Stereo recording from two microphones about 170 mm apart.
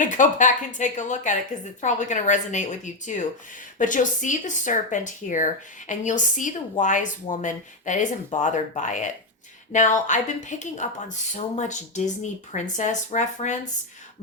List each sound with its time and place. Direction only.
0.0 s speech: 50° left (ahead or behind)